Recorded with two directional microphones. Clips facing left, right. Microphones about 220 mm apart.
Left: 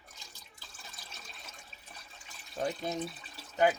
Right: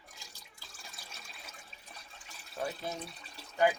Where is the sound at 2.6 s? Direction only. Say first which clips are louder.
Left 3 dB; 15° left (ahead or behind).